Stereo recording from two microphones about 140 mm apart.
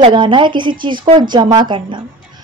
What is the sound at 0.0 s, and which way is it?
Speech, 35° right (ahead or behind).